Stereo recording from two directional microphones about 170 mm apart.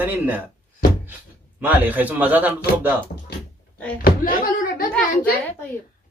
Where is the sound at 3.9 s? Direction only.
55° left (ahead or behind).